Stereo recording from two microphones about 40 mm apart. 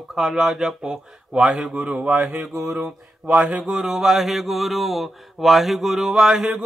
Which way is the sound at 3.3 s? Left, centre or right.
Centre.